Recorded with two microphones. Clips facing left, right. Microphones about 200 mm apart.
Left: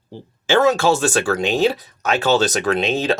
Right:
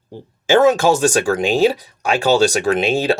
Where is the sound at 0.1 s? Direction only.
15° right (ahead or behind).